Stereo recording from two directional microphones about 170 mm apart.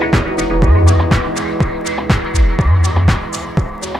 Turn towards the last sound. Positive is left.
turn(degrees=0)  # may be behind; listen again after turning